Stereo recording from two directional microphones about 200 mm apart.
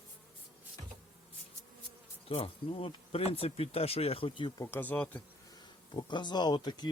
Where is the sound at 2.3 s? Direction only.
30° left (ahead or behind); by 5.2 s 5° left (ahead or behind).